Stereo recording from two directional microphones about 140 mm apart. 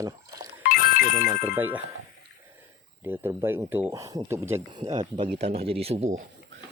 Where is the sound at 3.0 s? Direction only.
15° right (ahead or behind).